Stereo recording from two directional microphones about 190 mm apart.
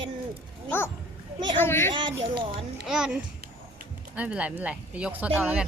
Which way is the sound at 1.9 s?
25° right (ahead or behind).